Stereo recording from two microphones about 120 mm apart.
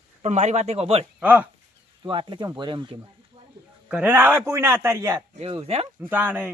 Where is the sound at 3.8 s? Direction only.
10° right (ahead or behind).